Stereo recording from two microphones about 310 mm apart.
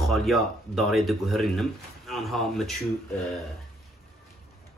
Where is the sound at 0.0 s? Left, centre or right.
Centre.